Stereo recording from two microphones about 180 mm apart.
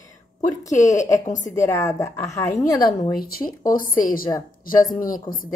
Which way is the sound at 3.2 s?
55° left (ahead or behind).